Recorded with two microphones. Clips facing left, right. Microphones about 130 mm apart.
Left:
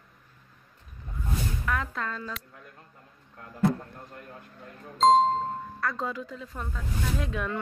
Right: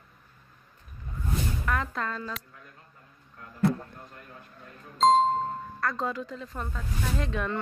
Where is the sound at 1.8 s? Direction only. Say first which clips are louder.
Right 1 dB; centre (ahead or behind).